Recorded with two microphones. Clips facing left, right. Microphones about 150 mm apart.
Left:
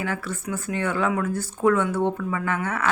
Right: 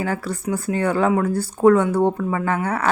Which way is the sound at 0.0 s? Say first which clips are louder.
Right 5 dB; 35° right (ahead or behind).